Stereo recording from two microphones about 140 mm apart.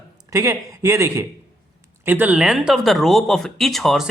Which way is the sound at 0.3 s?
20° right (ahead or behind).